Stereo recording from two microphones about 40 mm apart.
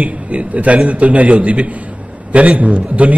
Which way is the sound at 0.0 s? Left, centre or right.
Right.